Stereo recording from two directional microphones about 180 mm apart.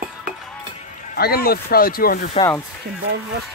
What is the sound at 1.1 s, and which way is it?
Speech, 60° left (ahead or behind).